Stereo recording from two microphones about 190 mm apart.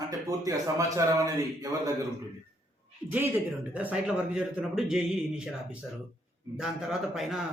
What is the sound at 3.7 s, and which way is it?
A man's voice, 5° right (ahead or behind).